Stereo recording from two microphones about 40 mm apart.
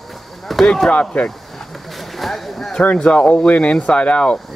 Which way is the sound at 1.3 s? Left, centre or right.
Centre.